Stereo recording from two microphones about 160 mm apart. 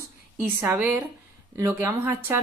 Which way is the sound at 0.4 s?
10° right (ahead or behind).